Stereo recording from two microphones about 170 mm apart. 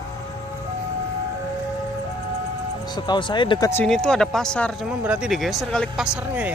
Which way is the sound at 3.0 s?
25° left (ahead or behind).